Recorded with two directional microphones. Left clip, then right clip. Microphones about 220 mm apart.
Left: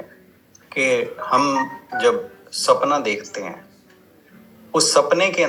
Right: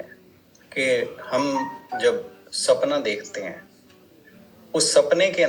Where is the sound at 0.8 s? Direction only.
20° left (ahead or behind).